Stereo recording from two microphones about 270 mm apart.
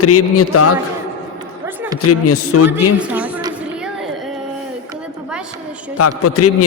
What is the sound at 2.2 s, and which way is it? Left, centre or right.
Speech, left.